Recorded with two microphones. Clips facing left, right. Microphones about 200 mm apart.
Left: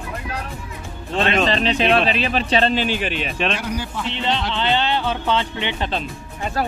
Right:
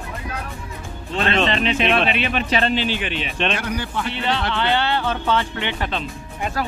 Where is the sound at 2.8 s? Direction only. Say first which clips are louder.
Left 2 dB; 45° left (ahead or behind).